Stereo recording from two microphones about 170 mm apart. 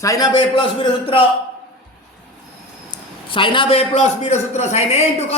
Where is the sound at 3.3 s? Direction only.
30° left (ahead or behind).